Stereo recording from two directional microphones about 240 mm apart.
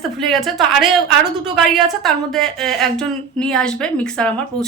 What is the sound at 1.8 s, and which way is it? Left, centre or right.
A woman's voice, centre.